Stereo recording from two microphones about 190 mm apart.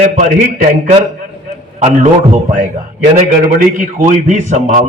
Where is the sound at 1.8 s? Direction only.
30° right (ahead or behind).